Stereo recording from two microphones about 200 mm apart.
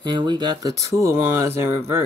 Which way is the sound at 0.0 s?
20° right (ahead or behind).